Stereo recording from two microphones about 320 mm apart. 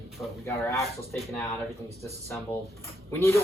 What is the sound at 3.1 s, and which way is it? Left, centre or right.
Speech, centre.